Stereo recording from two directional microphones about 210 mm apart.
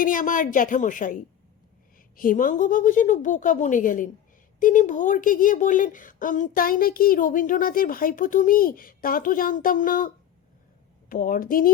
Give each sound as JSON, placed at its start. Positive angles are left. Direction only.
{"t": 0.0, "sound": "a woman's voice", "side_deg": 40}
{"t": 11.1, "sound": "a woman's voice", "side_deg": 45}